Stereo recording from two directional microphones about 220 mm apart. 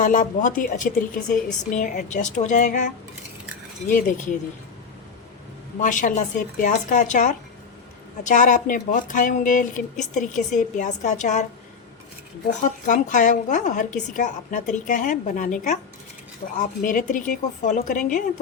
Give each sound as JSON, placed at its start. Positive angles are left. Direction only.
{"t": 0.0, "sound": "a woman's voice", "side_deg": 35}
{"t": 5.8, "sound": "a woman's voice", "side_deg": 35}
{"t": 12.5, "sound": "a woman's voice", "side_deg": 35}